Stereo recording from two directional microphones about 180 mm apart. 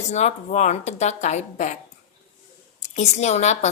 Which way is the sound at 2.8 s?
40° left (ahead or behind).